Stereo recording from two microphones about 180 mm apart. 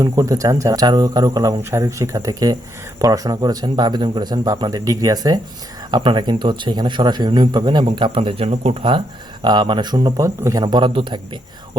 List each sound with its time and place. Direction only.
0.0 s speech: 20° right (ahead or behind)